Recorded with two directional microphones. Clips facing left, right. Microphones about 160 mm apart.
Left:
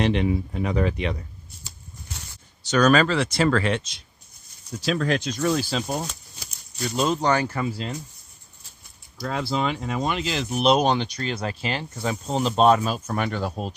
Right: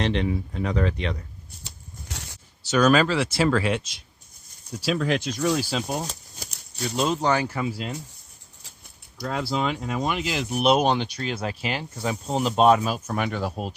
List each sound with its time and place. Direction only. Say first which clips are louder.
0.0 s speech: left 3 dB; 10° left (ahead or behind)
2.0 s a sound: right 2 dB; 85° right
2.6 s speech: left 1 dB; 5° right (ahead or behind)
9.1 s speech: left 1 dB; 5° right (ahead or behind)